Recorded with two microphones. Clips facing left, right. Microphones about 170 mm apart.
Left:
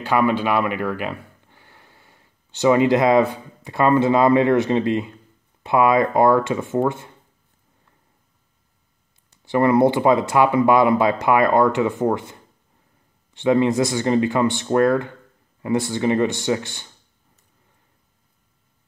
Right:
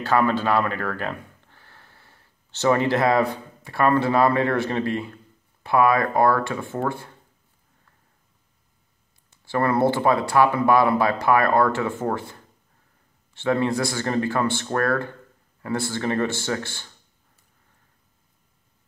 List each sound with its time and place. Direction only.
0.0 s speech: 10° left (ahead or behind)
9.4 s speech: 20° left (ahead or behind)